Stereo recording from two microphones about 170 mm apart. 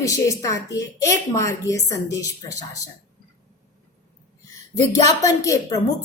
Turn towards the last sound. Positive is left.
turn(degrees=20)  # may be behind; listen again after turning